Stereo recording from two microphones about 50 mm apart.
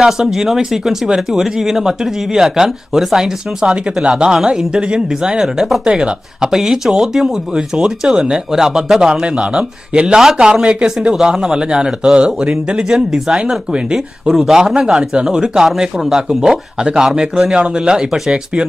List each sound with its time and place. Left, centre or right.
0.0 s speech: centre
9.2 s speech: right